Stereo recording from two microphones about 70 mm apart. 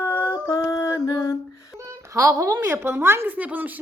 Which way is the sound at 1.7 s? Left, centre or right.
Right.